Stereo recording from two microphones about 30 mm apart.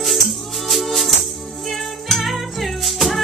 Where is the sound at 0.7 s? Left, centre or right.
Centre.